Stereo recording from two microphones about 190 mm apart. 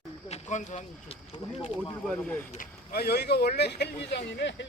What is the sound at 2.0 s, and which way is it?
Speech, 5° left (ahead or behind).